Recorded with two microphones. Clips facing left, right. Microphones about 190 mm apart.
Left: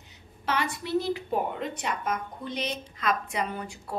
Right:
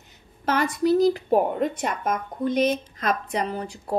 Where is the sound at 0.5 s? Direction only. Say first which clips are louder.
Right 8 dB; 45° right (ahead or behind).